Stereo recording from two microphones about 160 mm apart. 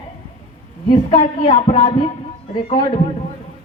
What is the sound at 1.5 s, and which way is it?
Speech, 35° left (ahead or behind).